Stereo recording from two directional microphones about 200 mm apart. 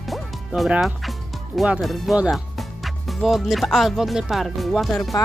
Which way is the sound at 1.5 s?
Centre (ahead or behind).